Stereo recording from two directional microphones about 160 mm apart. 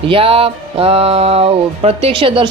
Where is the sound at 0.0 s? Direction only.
35° right (ahead or behind).